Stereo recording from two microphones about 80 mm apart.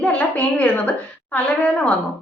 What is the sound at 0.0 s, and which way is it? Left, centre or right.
A woman's voice, centre.